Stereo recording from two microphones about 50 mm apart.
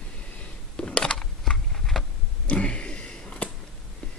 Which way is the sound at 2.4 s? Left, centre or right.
Left.